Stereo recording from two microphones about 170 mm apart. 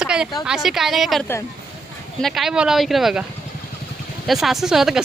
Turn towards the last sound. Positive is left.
turn(degrees=0)  # may be behind; listen again after turning